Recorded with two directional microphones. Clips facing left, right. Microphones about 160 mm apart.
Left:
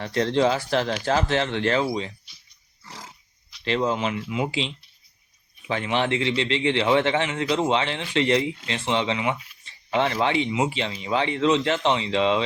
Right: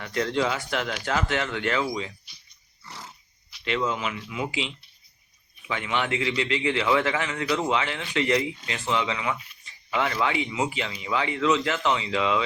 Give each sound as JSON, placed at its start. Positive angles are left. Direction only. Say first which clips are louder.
{"t": 0.0, "sound": "speech", "louder": "left 4 dB", "side_deg": 30}
{"t": 3.6, "sound": "a man's voice", "louder": "left 3 dB", "side_deg": 35}